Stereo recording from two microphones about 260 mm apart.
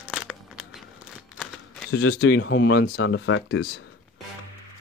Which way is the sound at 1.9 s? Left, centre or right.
Left.